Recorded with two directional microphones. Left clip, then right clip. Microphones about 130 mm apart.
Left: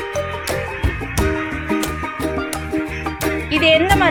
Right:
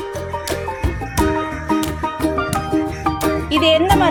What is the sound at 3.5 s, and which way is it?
Music, 35° right (ahead or behind).